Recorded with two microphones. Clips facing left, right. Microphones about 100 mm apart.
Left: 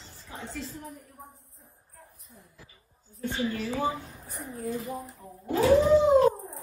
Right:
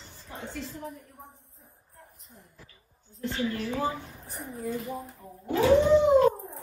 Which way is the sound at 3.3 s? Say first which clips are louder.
Even; 5° left (ahead or behind).